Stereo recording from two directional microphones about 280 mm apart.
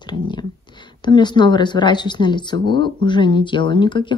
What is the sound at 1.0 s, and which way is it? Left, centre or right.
Speech, centre.